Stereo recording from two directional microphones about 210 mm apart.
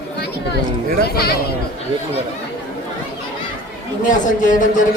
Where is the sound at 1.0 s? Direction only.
50° left (ahead or behind).